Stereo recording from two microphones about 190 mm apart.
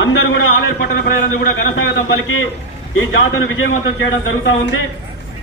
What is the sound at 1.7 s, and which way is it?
A man's voice, 80° left.